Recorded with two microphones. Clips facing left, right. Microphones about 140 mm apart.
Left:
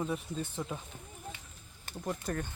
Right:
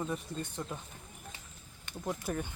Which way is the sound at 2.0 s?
5° right (ahead or behind).